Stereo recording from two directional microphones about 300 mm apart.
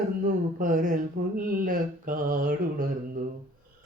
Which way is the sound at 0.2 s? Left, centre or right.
Right.